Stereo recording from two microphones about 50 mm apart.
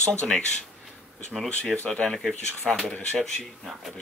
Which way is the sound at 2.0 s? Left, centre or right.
Centre.